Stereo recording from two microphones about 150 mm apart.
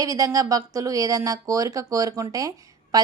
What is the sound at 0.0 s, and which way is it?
A woman's voice, 25° right (ahead or behind).